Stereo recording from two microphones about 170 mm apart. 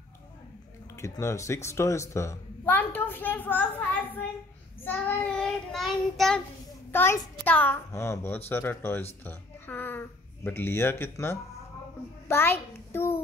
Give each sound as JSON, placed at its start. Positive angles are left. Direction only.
{"t": 0.9, "sound": "speech", "side_deg": 15}
{"t": 4.8, "sound": "child singing", "side_deg": 10}
{"t": 6.9, "sound": "a child's voice", "side_deg": 15}
{"t": 12.3, "sound": "a sound", "side_deg": 15}